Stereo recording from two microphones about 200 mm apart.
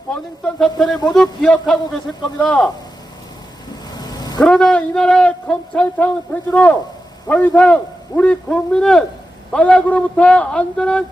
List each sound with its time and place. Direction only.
0.1 s a man's voice: 5° left (ahead or behind)
3.9 s vehicle: 20° left (ahead or behind)
4.4 s a man's voice: 5° left (ahead or behind)